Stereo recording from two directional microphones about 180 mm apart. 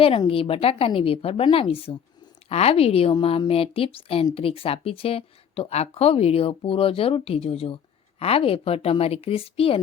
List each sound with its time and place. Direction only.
0.0 s a woman's voice: 30° left (ahead or behind)